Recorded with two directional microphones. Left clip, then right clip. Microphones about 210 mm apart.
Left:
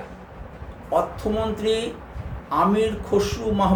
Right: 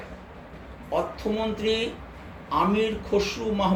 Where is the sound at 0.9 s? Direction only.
30° left (ahead or behind).